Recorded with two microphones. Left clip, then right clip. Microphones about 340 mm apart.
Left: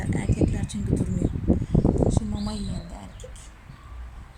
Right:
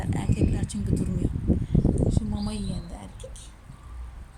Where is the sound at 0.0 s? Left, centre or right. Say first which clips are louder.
Left 3 dB; centre.